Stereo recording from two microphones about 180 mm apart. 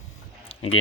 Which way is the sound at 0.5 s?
35° left (ahead or behind).